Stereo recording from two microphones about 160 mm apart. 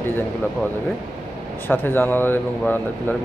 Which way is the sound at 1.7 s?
15° left (ahead or behind).